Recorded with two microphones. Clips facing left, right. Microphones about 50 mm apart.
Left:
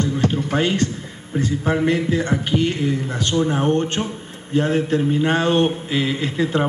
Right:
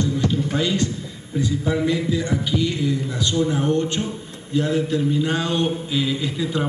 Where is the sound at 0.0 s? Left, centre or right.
Left.